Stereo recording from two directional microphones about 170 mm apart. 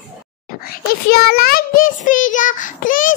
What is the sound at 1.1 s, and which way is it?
A child's voice, 60° left (ahead or behind).